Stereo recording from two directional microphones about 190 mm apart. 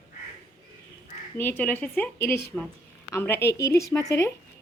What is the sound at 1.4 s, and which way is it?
A woman's voice, 10° left (ahead or behind).